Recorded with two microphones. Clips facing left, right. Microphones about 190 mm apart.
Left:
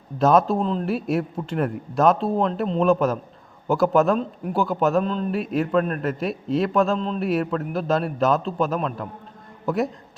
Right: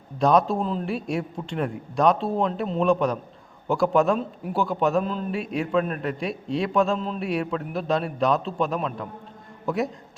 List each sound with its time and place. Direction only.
0.2 s a man's voice: centre (ahead or behind)